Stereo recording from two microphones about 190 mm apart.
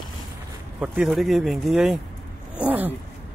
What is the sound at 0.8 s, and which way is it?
Speech, 5° right (ahead or behind).